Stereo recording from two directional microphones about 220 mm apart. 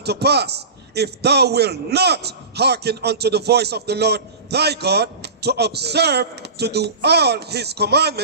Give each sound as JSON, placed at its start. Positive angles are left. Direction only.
{"t": 0.0, "sound": "a man's voice", "side_deg": -50}